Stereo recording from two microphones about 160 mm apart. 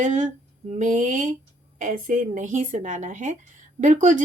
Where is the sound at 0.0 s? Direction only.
50° right (ahead or behind).